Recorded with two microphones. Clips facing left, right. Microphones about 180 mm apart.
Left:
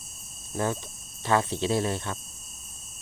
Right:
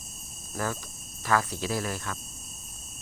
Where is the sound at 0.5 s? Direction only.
25° left (ahead or behind).